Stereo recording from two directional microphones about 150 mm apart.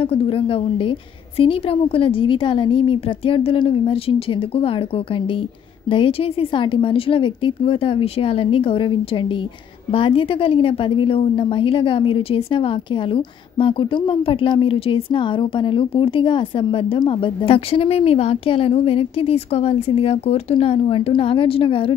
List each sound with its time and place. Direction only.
0.0 s a woman's voice: 40° left (ahead or behind)